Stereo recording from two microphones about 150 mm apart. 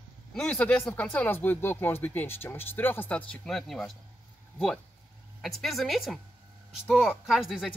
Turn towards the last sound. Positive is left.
turn(degrees=0)  # may be behind; listen again after turning